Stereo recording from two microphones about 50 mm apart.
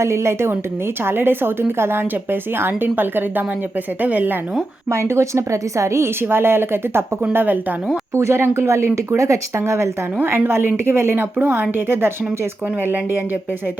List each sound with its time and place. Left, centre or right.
0.0 s a woman's voice: right
1.0 s a woman's voice: right
4.9 s a woman's voice: right
6.2 s speech: right
7.3 s a woman's voice: right
8.1 s a woman's voice: right
9.1 s a woman's voice: right
10.5 s speech: right